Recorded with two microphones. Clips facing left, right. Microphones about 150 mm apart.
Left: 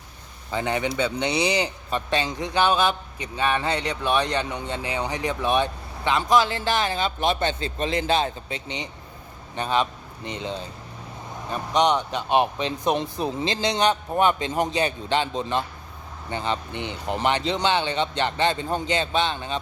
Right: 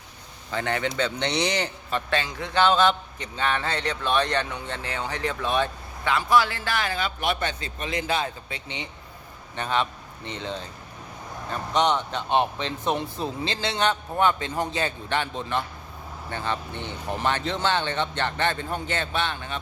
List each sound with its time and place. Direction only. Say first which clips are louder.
0.5 s a man's voice: left 2 dB; 15° left (ahead or behind)